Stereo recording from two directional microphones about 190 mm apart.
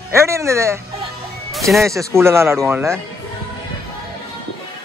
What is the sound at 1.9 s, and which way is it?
Speech, 15° right (ahead or behind).